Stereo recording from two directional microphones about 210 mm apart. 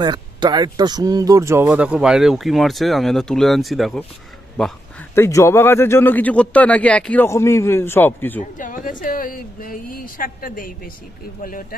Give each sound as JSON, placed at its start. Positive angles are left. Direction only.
{"t": 0.0, "sound": "speech", "side_deg": -20}
{"t": 5.2, "sound": "speech", "side_deg": 15}
{"t": 8.4, "sound": "speech", "side_deg": 40}